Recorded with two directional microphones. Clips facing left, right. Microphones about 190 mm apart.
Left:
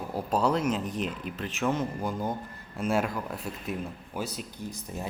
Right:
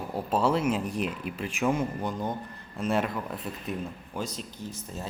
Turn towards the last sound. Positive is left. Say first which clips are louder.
# left 1 dB
turn(degrees=15)  # may be behind; listen again after turning